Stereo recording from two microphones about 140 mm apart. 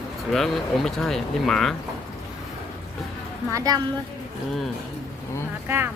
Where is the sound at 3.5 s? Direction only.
25° right (ahead or behind).